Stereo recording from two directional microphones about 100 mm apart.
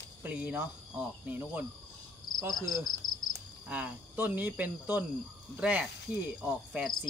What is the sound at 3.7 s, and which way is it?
Speech, 15° right (ahead or behind).